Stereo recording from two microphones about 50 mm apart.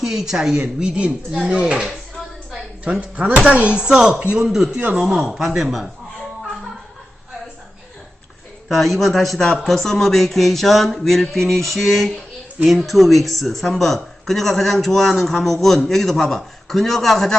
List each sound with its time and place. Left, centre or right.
0.0 s speech: centre
2.8 s a man's voice: centre
8.7 s a man's voice: centre